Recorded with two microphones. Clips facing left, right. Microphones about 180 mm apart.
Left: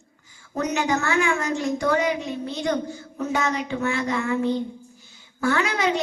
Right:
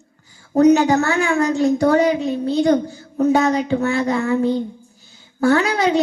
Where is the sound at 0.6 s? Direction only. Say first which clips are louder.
Right 11 dB; 35° right (ahead or behind).